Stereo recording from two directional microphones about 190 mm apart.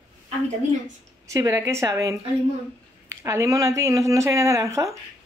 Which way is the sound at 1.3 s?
15° right (ahead or behind).